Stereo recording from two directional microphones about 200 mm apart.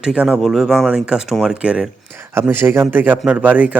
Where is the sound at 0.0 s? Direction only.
5° right (ahead or behind).